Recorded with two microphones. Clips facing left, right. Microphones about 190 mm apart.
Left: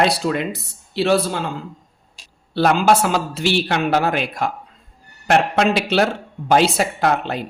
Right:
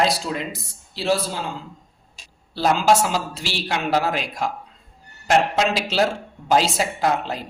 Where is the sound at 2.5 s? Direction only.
60° left (ahead or behind).